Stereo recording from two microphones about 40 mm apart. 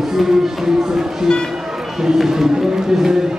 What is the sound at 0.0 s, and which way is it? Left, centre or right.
Speech, centre.